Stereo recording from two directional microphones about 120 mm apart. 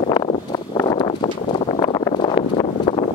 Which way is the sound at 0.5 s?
35° left (ahead or behind).